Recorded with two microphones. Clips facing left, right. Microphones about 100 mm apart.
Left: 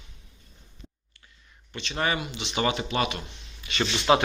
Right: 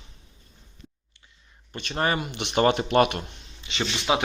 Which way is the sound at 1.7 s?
45° right (ahead or behind).